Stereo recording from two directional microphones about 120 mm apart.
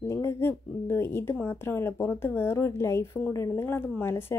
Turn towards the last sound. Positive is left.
turn(degrees=25)  # may be behind; listen again after turning